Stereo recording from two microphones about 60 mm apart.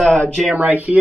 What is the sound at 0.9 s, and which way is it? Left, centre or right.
Speech, centre.